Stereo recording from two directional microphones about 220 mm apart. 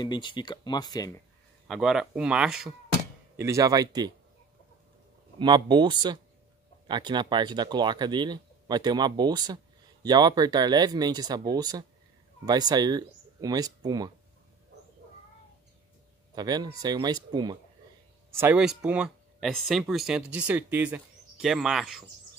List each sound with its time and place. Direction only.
0.0 s speech: 20° left (ahead or behind)
1.7 s speech: centre (ahead or behind)
3.3 s speech: 15° right (ahead or behind)
5.4 s speech: 20° right (ahead or behind)
16.3 s speech: 20° right (ahead or behind)
18.4 s speech: 5° right (ahead or behind)